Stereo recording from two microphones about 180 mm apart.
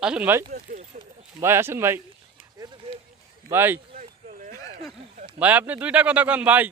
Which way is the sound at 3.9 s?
45° right (ahead or behind).